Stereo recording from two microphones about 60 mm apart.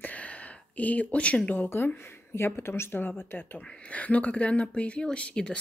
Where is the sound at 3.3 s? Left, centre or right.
Left.